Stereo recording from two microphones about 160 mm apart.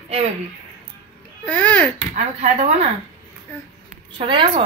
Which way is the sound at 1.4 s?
10° left (ahead or behind).